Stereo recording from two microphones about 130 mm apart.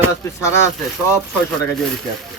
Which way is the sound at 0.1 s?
20° left (ahead or behind).